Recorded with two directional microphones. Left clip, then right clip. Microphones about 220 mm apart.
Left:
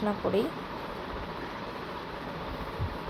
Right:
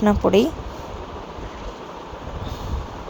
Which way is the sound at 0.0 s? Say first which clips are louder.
Right 11 dB; 40° right (ahead or behind).